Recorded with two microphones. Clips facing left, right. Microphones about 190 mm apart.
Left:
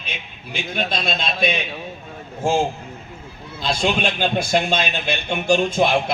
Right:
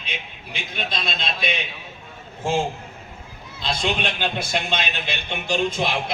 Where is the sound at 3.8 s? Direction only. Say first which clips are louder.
Left 4 dB; 45° left (ahead or behind).